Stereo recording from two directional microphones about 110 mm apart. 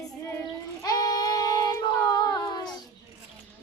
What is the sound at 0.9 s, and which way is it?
Child singing, 35° left (ahead or behind).